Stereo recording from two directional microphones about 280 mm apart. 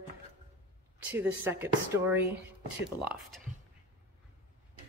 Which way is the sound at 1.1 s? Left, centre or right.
Centre.